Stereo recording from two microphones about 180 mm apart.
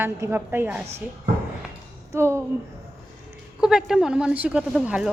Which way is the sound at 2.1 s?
15° right (ahead or behind).